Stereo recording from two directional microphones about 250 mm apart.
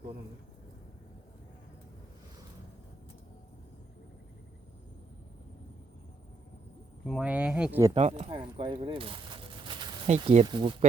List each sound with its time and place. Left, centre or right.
7.0 s speech: centre
7.9 s speech: right